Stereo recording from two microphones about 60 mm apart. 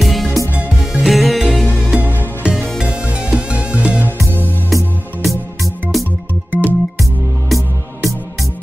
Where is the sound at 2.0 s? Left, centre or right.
Right.